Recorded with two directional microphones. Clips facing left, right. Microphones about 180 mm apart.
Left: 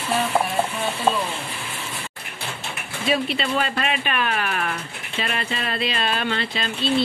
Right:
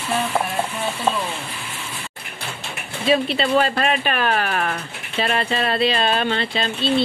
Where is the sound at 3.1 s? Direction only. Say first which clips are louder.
Right 5 dB; 35° right (ahead or behind).